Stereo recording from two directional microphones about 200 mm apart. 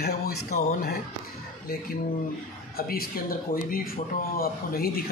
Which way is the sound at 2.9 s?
45° left (ahead or behind).